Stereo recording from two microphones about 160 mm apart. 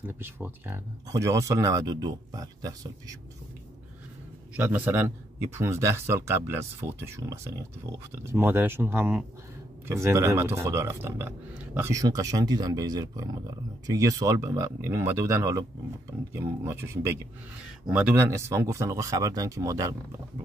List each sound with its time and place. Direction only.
0.0 s speech: 15° right (ahead or behind)
4.6 s speech: 10° right (ahead or behind)